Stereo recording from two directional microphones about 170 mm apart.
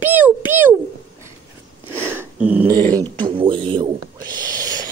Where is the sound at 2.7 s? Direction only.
25° right (ahead or behind).